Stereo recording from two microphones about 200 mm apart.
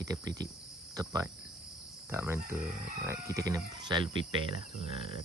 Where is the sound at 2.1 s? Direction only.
10° right (ahead or behind).